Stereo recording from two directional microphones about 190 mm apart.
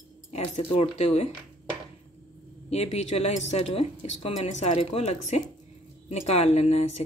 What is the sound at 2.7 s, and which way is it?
Speech, 35° left (ahead or behind).